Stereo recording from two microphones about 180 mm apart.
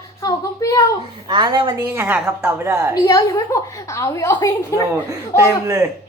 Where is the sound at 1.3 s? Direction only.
25° right (ahead or behind).